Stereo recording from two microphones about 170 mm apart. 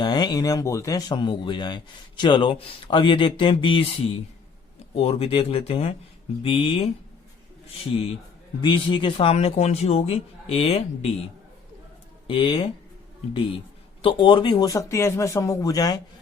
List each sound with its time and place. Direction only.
0.0 s speech: 25° left (ahead or behind)
8.6 s speech: 30° left (ahead or behind)
12.3 s speech: 30° left (ahead or behind)
14.0 s speech: 30° left (ahead or behind)